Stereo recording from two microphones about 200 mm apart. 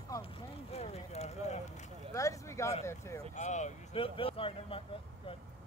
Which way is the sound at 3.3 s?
35° left (ahead or behind).